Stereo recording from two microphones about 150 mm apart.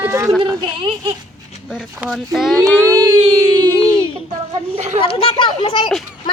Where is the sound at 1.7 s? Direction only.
5° right (ahead or behind).